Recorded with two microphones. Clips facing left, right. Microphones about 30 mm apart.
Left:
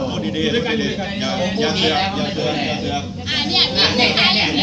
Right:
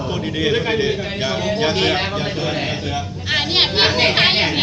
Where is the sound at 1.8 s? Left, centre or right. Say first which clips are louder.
Left 1 dB; centre.